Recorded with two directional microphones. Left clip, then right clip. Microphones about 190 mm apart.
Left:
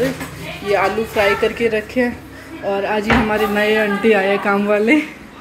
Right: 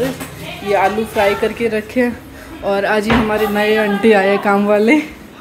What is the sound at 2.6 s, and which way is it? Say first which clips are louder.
Speech: right 4 dB; 20° right (ahead or behind).